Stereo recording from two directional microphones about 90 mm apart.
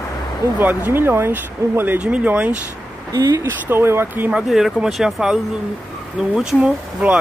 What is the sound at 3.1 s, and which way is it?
Speech, 45° right (ahead or behind).